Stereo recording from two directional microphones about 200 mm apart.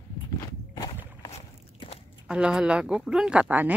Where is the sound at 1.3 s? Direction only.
30° left (ahead or behind).